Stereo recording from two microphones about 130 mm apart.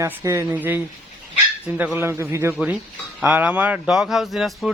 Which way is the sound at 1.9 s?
20° right (ahead or behind).